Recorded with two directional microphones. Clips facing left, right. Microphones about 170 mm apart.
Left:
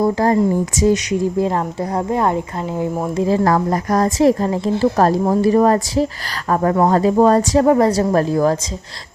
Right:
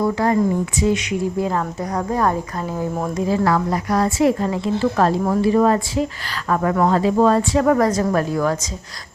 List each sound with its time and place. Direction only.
0.0 s a woman's voice: 35° left (ahead or behind); by 2.8 s 20° left (ahead or behind)
3.2 s a woman's voice: 35° left (ahead or behind)